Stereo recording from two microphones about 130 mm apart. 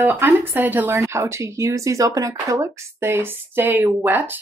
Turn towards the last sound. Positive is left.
turn(degrees=-15)  # may be behind; listen again after turning